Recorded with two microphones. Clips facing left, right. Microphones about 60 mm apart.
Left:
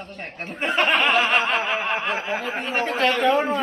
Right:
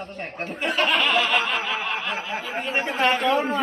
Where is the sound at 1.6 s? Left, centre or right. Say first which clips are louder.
Left 3 dB; left.